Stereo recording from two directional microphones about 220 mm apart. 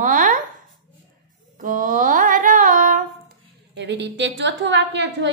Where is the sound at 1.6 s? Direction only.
35° right (ahead or behind).